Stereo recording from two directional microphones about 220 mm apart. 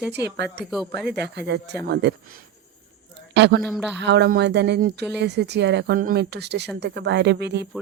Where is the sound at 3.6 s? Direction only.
Centre (ahead or behind).